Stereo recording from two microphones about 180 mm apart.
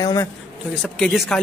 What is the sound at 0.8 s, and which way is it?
Speech, centre (ahead or behind).